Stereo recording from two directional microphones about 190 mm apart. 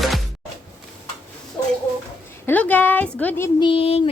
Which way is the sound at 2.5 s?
10° left (ahead or behind).